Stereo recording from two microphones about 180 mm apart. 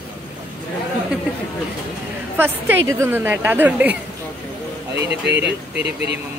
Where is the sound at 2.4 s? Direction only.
10° right (ahead or behind).